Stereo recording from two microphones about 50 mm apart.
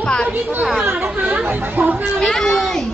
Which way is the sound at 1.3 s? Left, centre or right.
Right.